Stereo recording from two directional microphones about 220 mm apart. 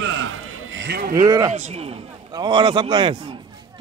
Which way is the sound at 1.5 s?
30° right (ahead or behind).